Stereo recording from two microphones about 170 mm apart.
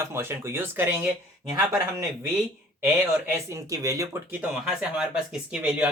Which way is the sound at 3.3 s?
20° right (ahead or behind).